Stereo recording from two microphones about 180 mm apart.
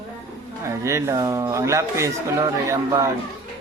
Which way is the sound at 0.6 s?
15° right (ahead or behind).